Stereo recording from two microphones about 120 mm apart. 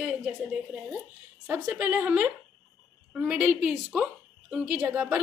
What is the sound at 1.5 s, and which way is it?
A woman's voice, 15° right (ahead or behind).